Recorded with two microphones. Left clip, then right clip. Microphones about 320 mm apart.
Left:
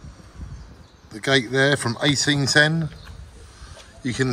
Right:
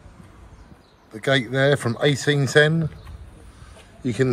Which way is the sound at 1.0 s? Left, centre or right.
Centre.